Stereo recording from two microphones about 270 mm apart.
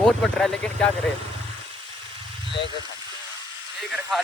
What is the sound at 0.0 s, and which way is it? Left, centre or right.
Speech, centre.